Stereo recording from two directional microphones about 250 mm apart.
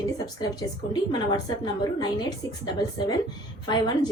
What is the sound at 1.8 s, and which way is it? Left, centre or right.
Speech, centre.